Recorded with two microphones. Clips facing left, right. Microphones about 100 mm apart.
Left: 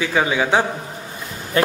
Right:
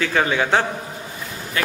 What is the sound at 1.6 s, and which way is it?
Speech, 35° left (ahead or behind).